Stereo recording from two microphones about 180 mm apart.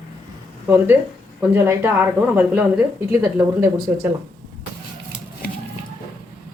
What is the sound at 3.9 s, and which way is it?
Speech, 5° right (ahead or behind).